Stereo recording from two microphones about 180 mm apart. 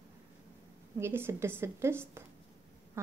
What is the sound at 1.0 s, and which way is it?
A woman's voice, 15° right (ahead or behind).